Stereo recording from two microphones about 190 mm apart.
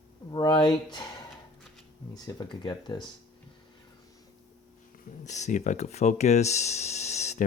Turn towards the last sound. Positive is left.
turn(degrees=35)  # may be behind; listen again after turning